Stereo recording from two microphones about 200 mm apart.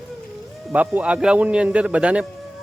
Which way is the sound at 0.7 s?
5° right (ahead or behind).